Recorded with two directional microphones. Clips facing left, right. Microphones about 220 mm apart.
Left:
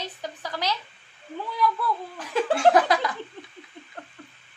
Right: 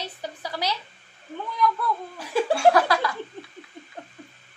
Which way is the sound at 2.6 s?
20° left (ahead or behind).